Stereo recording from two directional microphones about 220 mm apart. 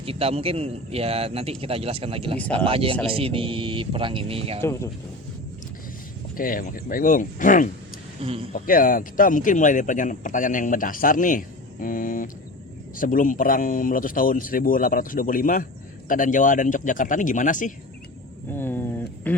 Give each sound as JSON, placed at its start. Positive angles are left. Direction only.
{"t": 0.0, "sound": "a man's voice", "side_deg": -25}
{"t": 4.6, "sound": "speech", "side_deg": 15}
{"t": 6.3, "sound": "speech", "side_deg": 40}
{"t": 8.2, "sound": "a man's voice", "side_deg": -25}
{"t": 8.5, "sound": "speech", "side_deg": 40}
{"t": 18.5, "sound": "speech", "side_deg": 10}